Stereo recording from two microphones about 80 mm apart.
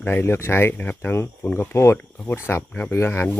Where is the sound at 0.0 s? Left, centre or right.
Left.